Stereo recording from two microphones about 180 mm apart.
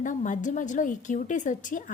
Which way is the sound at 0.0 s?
45° left (ahead or behind).